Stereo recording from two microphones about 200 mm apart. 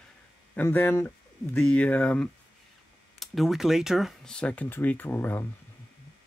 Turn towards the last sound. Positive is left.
turn(degrees=10)  # may be behind; listen again after turning